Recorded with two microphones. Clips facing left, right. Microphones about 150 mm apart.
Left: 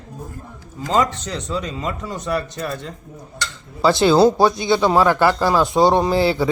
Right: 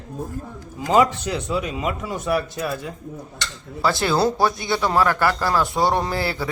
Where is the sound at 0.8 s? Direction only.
10° right (ahead or behind).